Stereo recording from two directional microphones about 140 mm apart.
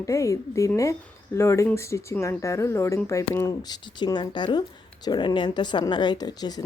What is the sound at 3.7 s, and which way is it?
Speech, 35° left (ahead or behind).